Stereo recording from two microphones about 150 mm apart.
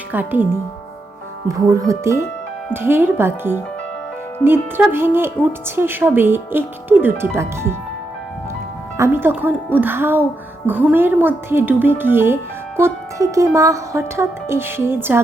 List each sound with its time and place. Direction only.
0.1 s speech: 10° right (ahead or behind)
1.5 s speech: 20° right (ahead or behind)
9.0 s speech: 15° right (ahead or behind)